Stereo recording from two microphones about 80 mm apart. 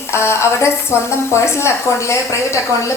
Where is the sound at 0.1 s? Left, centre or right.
Left.